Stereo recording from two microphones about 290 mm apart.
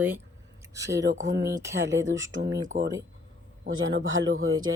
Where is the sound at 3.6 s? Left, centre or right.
Right.